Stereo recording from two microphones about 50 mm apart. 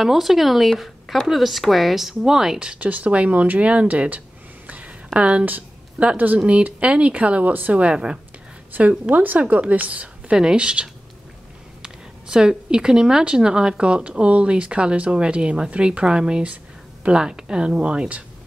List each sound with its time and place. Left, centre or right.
0.0 s speech: centre
2.8 s speech: right
4.6 s a sound: right
6.1 s speech: right
6.4 s speech: right
8.7 s speech: right
10.3 s speech: centre
11.8 s a sound: centre
13.2 s speech: centre